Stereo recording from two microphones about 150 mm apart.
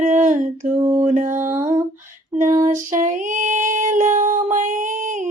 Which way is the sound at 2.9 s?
60° right (ahead or behind).